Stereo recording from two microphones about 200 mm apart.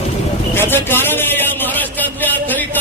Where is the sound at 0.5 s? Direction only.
10° left (ahead or behind).